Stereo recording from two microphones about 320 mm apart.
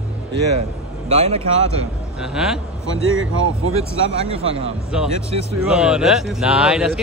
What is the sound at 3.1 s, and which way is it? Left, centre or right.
Speech, right.